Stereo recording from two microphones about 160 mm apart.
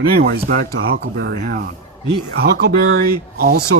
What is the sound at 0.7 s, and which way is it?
Speech, 85° right.